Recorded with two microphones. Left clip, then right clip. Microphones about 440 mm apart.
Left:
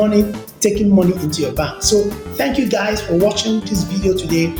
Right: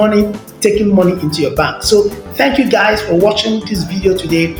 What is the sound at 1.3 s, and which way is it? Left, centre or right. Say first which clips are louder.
Speech: right 6 dB; left.